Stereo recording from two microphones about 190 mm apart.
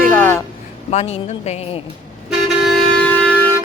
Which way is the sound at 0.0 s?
10° left (ahead or behind).